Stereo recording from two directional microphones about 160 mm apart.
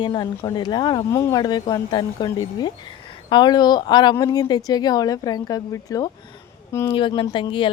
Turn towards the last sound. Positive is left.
turn(degrees=30)  # may be behind; listen again after turning